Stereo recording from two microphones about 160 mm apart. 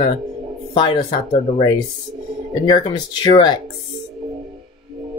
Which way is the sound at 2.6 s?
25° left (ahead or behind).